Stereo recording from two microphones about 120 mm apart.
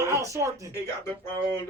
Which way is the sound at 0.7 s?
20° left (ahead or behind).